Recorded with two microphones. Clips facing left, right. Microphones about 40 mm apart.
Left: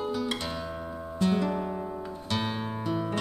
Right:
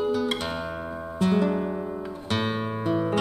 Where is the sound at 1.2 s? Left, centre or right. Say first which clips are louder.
Right 4 dB; right.